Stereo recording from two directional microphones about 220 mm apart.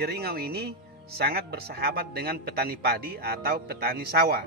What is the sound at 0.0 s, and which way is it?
Speech, 45° right (ahead or behind).